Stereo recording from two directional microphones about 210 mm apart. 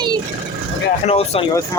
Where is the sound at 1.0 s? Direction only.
30° left (ahead or behind).